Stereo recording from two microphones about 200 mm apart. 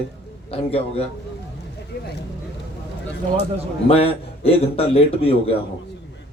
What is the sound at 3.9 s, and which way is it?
Speech, 30° left (ahead or behind).